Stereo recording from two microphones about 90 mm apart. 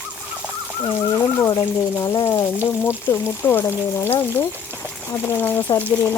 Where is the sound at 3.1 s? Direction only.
25° left (ahead or behind).